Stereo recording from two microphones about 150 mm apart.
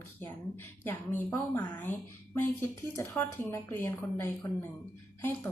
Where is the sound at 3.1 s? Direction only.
15° left (ahead or behind).